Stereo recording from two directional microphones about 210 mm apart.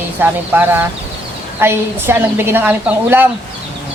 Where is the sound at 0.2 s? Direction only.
10° right (ahead or behind).